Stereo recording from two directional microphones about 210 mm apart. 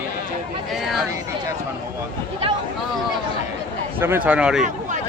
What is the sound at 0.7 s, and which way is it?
Speech, centre (ahead or behind).